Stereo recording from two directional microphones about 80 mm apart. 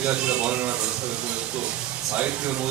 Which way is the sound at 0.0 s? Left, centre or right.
Centre.